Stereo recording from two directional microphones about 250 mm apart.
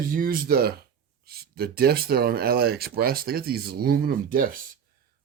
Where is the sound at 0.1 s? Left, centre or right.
Right.